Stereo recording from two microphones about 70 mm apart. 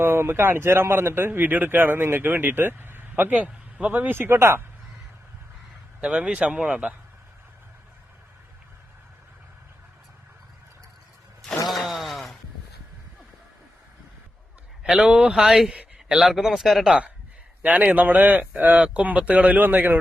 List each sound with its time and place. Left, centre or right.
0.0 s speech: right
4.1 s speech: right
6.0 s speech: centre
11.7 s a sound: centre
14.8 s speech: centre
15.7 s a sound: centre
16.1 s speech: centre
17.6 s speech: right